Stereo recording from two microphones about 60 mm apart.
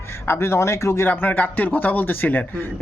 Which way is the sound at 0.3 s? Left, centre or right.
Left.